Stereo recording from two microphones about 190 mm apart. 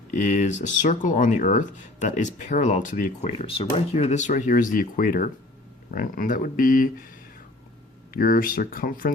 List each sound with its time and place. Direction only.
0.3 s speech: 40° left (ahead or behind)
8.1 s speech: 45° left (ahead or behind)